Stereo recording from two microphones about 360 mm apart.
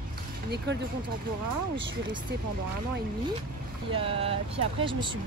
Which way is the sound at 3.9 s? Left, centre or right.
Centre.